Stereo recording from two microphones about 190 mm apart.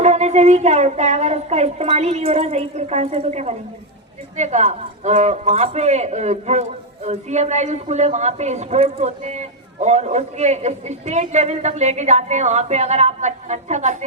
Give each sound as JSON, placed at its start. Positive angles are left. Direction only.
{"t": 0.0, "sound": "a man's voice", "side_deg": -35}